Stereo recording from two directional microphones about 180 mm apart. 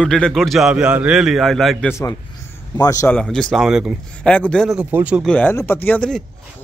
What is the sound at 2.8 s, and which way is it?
Speech, 20° left (ahead or behind).